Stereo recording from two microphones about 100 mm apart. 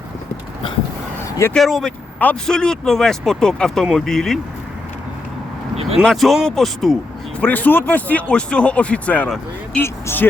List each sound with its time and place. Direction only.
1.5 s speech: centre (ahead or behind)
6.0 s speech: centre (ahead or behind)
7.4 s speech: 15° left (ahead or behind)